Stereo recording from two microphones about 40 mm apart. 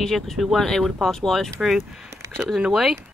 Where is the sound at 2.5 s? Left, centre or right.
Centre.